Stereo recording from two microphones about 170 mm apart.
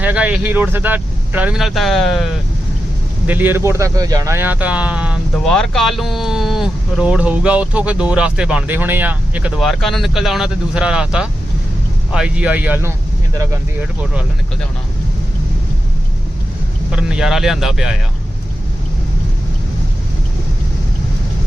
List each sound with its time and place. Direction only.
0.0 s speech: 10° right (ahead or behind)
3.2 s speech: 10° right (ahead or behind)
16.9 s speech: 5° right (ahead or behind)